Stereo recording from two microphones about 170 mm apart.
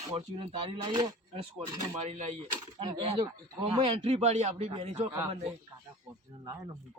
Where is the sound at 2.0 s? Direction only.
40° right (ahead or behind).